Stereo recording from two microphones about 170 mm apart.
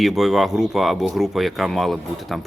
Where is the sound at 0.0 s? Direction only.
Centre (ahead or behind).